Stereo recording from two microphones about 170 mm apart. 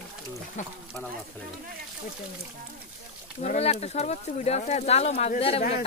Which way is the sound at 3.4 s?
40° left (ahead or behind).